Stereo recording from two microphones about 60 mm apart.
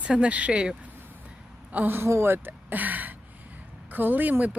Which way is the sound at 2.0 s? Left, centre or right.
Right.